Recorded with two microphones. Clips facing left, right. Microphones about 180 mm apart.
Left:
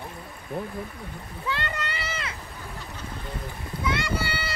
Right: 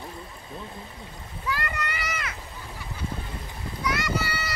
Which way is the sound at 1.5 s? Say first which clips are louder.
Even; 25° left (ahead or behind).